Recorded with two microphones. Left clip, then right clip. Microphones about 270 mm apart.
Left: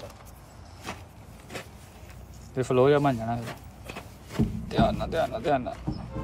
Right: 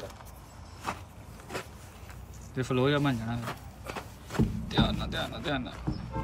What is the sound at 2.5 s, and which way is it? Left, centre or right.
Speech, centre.